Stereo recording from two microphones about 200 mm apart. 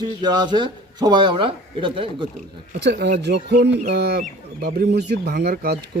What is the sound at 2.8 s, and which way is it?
Speech, 55° right (ahead or behind).